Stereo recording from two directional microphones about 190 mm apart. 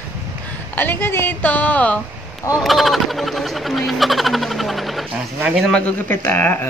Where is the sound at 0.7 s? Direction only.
10° left (ahead or behind).